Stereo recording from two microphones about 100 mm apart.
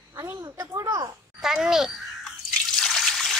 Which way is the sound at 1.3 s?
5° right (ahead or behind).